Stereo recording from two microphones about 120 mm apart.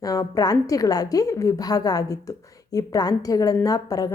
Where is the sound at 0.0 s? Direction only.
30° left (ahead or behind).